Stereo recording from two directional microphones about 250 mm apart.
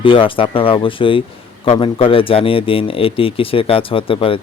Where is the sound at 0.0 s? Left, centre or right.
Left.